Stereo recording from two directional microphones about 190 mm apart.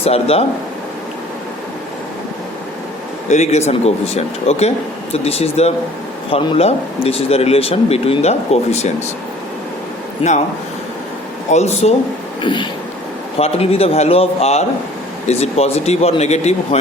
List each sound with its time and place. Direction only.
0.0 s speech: 30° left (ahead or behind)
3.2 s speech: 35° left (ahead or behind)
10.2 s speech: 30° left (ahead or behind)
11.5 s speech: 35° left (ahead or behind)
12.4 s a sound: 25° left (ahead or behind)
13.4 s speech: 30° left (ahead or behind)